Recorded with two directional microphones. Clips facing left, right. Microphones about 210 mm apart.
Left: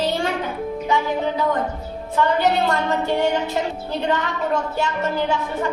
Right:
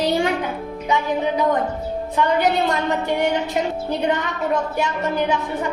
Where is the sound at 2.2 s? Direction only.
15° right (ahead or behind).